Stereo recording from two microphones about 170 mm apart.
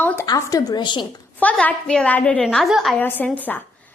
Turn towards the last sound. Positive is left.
turn(degrees=10)  # may be behind; listen again after turning